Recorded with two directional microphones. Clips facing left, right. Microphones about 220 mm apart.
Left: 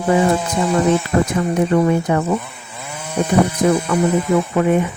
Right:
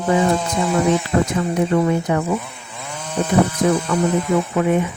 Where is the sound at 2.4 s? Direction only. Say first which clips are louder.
Even; 5° left (ahead or behind).